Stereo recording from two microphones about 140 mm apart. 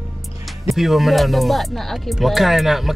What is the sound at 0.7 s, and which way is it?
Speech, centre (ahead or behind).